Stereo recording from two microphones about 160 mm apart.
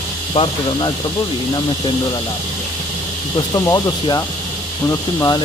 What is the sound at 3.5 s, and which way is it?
Speech, 25° left (ahead or behind).